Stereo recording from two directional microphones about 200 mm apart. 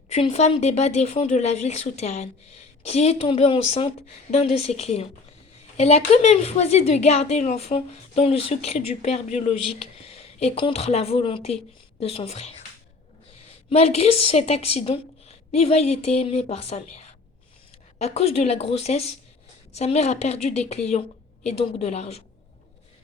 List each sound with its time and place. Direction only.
0.1 s a woman's voice: 35° left (ahead or behind)
13.7 s a woman's voice: 30° left (ahead or behind)